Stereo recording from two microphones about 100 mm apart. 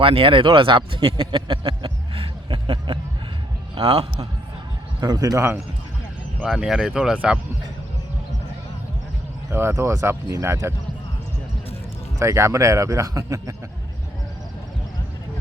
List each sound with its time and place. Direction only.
0.0 s speech: 60° right (ahead or behind)
3.8 s a man's voice: 75° right (ahead or behind)
4.9 s speech: 40° right (ahead or behind)
5.4 s speech: 25° right (ahead or behind)
6.4 s speech: 5° right (ahead or behind)
9.5 s speech: 25° right (ahead or behind)
12.2 s speech: 30° right (ahead or behind)